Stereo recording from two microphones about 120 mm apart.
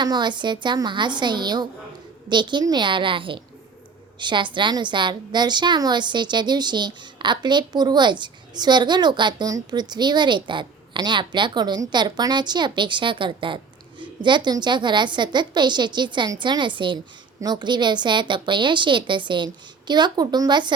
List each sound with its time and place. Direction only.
0.0 s a woman's voice: 35° right (ahead or behind)